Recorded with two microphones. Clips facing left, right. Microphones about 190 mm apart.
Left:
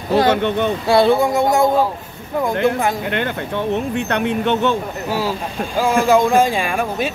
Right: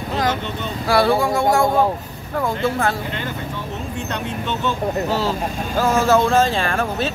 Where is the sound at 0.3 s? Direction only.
60° left (ahead or behind).